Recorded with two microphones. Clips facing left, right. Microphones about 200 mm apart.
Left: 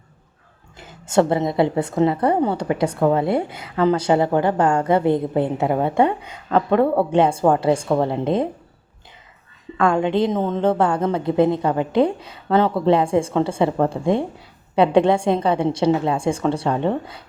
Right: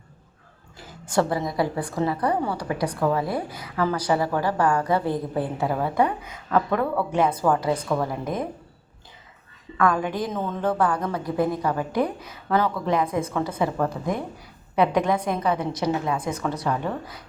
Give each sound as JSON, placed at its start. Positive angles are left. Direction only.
{"t": 0.8, "sound": "a woman's voice", "side_deg": 25}
{"t": 9.7, "sound": "a woman's voice", "side_deg": 25}